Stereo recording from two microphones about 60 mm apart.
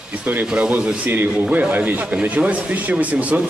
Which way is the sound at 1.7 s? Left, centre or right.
Right.